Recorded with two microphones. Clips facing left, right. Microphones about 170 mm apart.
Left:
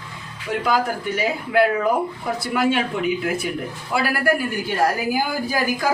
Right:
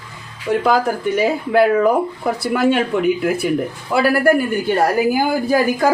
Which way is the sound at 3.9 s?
55° right (ahead or behind).